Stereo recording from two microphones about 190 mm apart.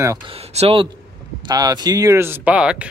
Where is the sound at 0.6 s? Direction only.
30° right (ahead or behind).